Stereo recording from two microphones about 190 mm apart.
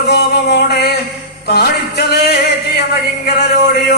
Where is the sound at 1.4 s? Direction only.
60° left (ahead or behind).